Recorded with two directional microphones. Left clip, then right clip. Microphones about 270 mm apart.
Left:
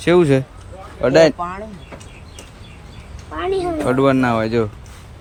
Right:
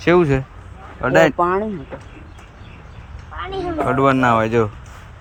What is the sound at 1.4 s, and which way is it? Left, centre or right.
Speech, right.